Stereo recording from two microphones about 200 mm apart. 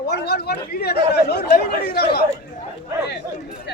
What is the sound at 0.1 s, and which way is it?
Speech, 55° left (ahead or behind).